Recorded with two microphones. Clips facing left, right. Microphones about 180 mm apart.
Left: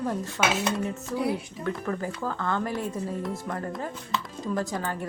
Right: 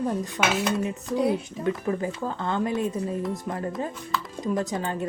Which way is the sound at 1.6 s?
20° right (ahead or behind).